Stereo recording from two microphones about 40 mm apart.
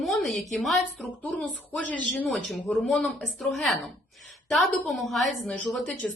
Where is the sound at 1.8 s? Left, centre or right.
Left.